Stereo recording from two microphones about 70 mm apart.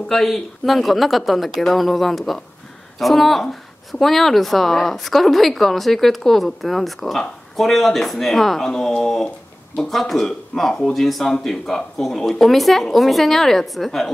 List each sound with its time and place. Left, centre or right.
0.1 s a woman's voice: centre